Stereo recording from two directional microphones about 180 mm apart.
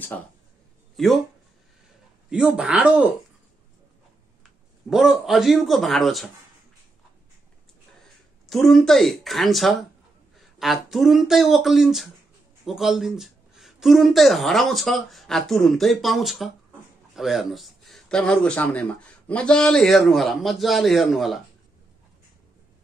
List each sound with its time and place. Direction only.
0.1 s speech: 10° left (ahead or behind)
0.9 s speech: centre (ahead or behind)
2.2 s speech: 5° right (ahead or behind)
4.8 s speech: centre (ahead or behind)
8.5 s speech: centre (ahead or behind)